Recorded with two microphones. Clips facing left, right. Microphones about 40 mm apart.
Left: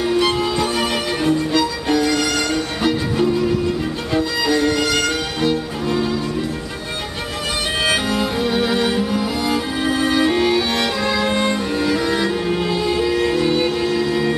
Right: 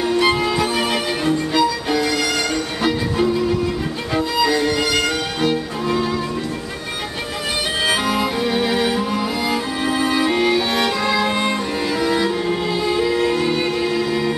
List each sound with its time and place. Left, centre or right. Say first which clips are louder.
0.2 s music: right 1 dB; centre
4.5 s music: left 1 dB; centre
7.8 s music: even; centre